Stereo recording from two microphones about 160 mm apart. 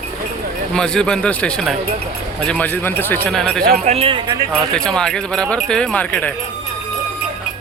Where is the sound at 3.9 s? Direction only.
35° right (ahead or behind).